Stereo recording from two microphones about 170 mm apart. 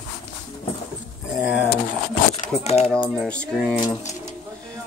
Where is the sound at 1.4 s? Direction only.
10° right (ahead or behind).